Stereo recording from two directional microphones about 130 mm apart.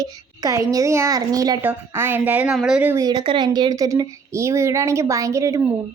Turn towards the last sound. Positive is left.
turn(degrees=-25)  # may be behind; listen again after turning